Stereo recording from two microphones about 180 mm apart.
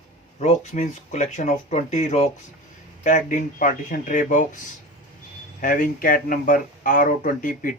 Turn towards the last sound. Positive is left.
turn(degrees=50)  # may be behind; listen again after turning